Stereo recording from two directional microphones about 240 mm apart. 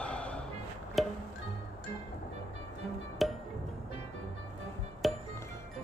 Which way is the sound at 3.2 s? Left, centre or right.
Centre.